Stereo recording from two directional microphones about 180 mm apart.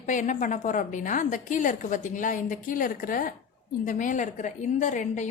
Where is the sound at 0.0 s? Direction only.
45° left (ahead or behind).